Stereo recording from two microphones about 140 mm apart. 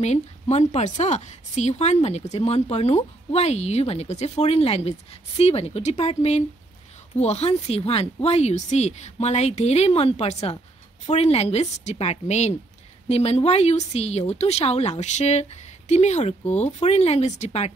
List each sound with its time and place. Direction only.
0.0 s speech: 55° left (ahead or behind)